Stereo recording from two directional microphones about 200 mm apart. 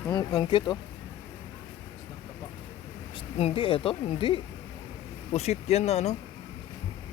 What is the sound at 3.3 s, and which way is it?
Speech, 30° left (ahead or behind).